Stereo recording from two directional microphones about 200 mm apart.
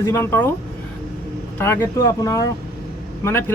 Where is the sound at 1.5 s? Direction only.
10° left (ahead or behind).